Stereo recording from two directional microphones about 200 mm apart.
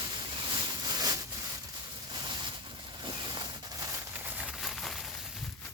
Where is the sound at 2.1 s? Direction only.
20° right (ahead or behind); by 5.7 s centre (ahead or behind).